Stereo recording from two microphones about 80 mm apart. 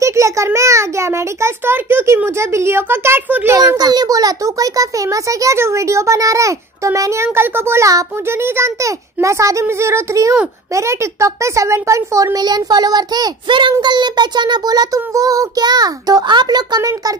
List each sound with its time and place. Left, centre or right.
0.0 s a child's voice: right
3.7 s a child's voice: right
12.4 s a child's voice: right
13.5 s a child's voice: right